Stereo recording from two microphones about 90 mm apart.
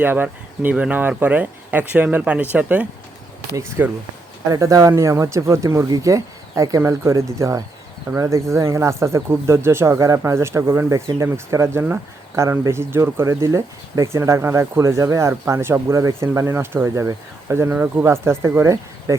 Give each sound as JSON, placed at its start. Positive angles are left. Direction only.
{"t": 0.0, "sound": "speech", "side_deg": -20}
{"t": 3.5, "sound": "speech", "side_deg": -30}
{"t": 4.4, "sound": "speech", "side_deg": -40}